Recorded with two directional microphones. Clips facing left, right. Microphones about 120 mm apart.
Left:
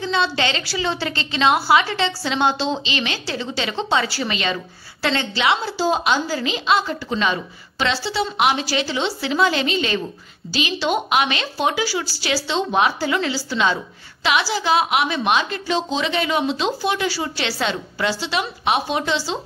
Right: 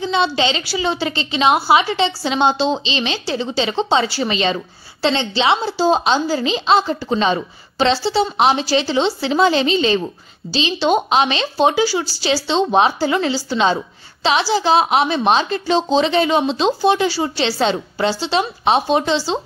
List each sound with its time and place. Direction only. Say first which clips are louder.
0.0 s a woman's voice: right 3 dB; 20° right (ahead or behind)